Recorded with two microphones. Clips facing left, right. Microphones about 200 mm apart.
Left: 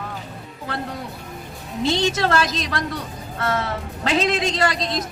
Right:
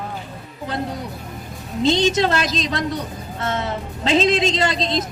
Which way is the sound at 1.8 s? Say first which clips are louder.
Right 3 dB; 20° right (ahead or behind).